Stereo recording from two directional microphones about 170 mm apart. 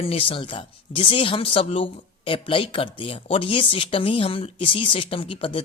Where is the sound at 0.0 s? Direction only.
30° left (ahead or behind).